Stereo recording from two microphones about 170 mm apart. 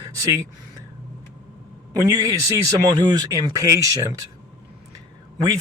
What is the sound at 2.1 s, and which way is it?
Speech, 20° right (ahead or behind).